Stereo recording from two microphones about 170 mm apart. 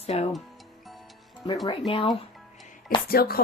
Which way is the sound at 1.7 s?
35° left (ahead or behind).